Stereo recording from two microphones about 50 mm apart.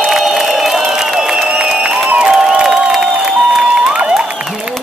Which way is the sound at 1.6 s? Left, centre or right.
Centre.